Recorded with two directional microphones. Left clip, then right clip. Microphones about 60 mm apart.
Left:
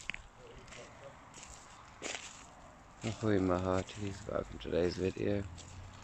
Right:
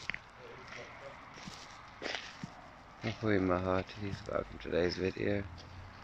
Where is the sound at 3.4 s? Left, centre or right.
Left.